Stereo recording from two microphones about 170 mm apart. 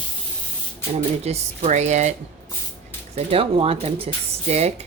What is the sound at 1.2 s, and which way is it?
Speech, 40° right (ahead or behind).